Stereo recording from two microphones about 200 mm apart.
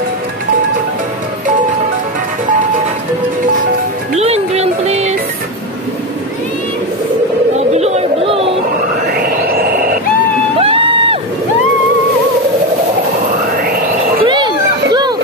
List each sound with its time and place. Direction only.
4.1 s music: 30° right (ahead or behind)
7.7 s chatter: 35° right (ahead or behind)
9.1 s music: 50° right (ahead or behind)
10.6 s a sound: 25° right (ahead or behind)
13.7 s music: 50° right (ahead or behind)
14.2 s a sound: 25° right (ahead or behind)